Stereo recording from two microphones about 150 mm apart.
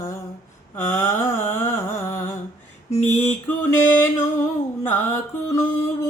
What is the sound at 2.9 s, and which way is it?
Mantra, 50° left (ahead or behind).